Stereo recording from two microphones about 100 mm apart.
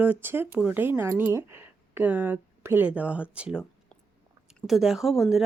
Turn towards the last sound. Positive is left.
turn(degrees=0)  # may be behind; listen again after turning